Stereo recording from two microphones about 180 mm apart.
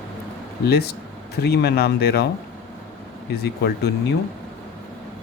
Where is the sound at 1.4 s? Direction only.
60° left (ahead or behind).